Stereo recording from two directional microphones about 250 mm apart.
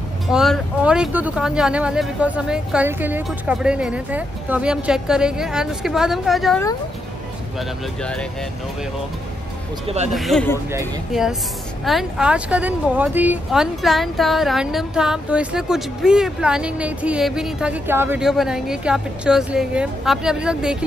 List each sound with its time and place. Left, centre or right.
0.3 s speech: centre
9.8 s speech: right
10.1 s speech: centre